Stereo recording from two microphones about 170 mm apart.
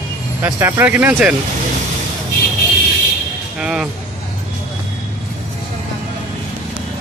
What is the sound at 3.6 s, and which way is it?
Speech, 5° right (ahead or behind).